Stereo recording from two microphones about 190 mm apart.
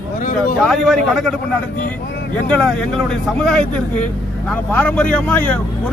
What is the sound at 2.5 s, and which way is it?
Speech, 5° left (ahead or behind).